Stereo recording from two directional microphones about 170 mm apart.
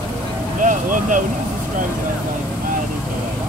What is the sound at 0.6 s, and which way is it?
Vehicle, 50° right (ahead or behind).